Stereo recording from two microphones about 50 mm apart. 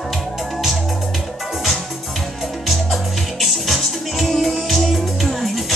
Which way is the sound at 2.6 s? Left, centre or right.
Centre.